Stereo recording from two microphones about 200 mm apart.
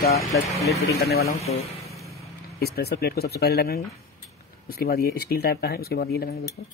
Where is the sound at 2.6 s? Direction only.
50° left (ahead or behind).